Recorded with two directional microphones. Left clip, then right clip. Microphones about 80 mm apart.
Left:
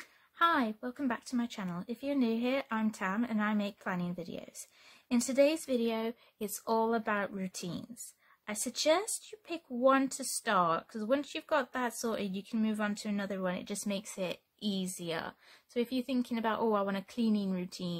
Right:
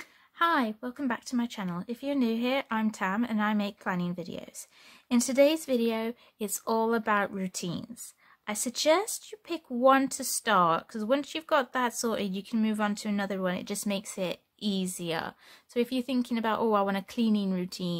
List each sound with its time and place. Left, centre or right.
0.0 s a woman's voice: right